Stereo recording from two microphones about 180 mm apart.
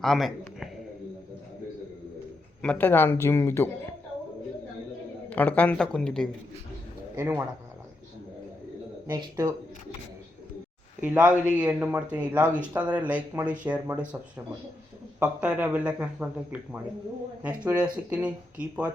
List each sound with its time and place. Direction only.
0.0 s a sound: centre (ahead or behind)
2.6 s speech: 10° left (ahead or behind)
5.3 s speech: 10° left (ahead or behind)
7.2 s speech: 15° right (ahead or behind)
9.0 s speech: 25° right (ahead or behind)
11.0 s speech: 10° right (ahead or behind)
15.2 s speech: 10° right (ahead or behind)